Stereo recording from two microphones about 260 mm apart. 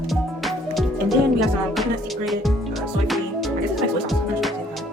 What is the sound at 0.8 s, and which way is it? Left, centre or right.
Speech, centre.